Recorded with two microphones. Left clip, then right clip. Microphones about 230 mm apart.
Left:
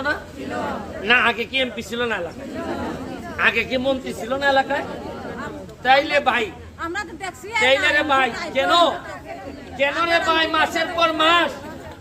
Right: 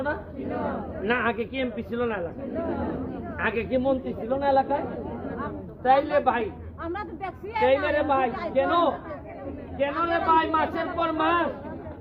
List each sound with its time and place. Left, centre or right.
1.0 s a man's voice: centre
3.3 s a man's voice: centre
5.8 s a man's voice: centre
6.8 s speech: right
7.6 s a man's voice: centre